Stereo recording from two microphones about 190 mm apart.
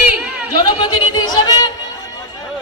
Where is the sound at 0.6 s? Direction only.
25° left (ahead or behind).